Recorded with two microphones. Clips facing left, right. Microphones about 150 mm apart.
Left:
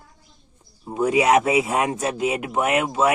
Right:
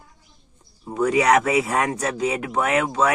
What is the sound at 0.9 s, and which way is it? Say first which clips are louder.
Speech: even; 20° left (ahead or behind).